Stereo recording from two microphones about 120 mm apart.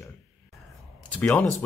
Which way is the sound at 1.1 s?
10° left (ahead or behind).